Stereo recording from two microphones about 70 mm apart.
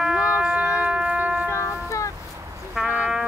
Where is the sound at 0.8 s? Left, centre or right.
Centre.